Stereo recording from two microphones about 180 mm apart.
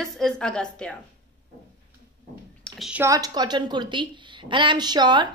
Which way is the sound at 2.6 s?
Centre (ahead or behind).